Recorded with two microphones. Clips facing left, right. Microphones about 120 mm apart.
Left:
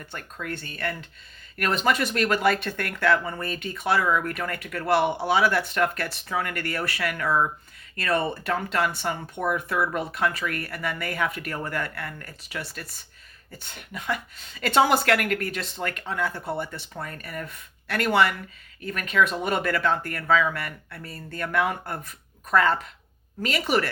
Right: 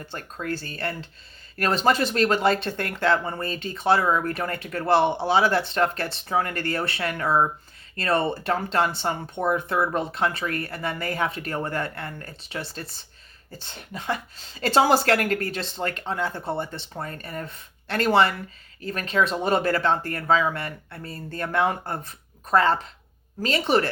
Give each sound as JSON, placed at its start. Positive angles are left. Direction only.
{"t": 0.0, "sound": "speech", "side_deg": -30}